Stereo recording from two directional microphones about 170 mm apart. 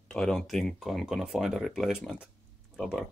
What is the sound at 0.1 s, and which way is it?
Speech, 5° left (ahead or behind).